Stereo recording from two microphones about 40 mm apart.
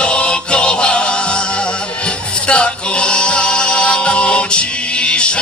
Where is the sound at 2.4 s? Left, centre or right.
Left.